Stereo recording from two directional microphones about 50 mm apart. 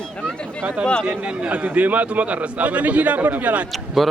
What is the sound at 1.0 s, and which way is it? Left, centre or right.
A man's voice, right.